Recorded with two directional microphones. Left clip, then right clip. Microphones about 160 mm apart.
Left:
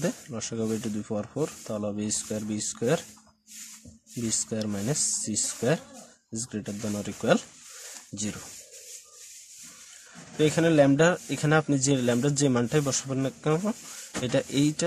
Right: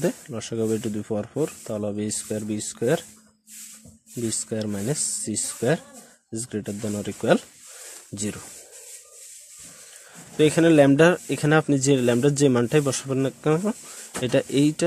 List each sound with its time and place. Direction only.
0.0 s speech: 30° right (ahead or behind)
4.3 s speech: 20° right (ahead or behind)
10.3 s speech: 35° right (ahead or behind)